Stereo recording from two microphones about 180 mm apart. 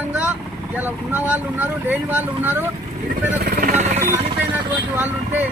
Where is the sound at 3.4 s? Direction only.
50° right (ahead or behind).